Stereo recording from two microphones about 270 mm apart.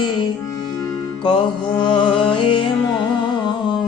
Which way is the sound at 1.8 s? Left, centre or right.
Centre.